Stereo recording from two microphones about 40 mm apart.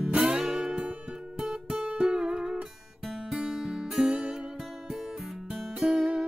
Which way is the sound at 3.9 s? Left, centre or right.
Right.